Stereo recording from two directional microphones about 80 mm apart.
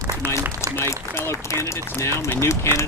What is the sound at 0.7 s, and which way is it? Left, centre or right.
Speech, left.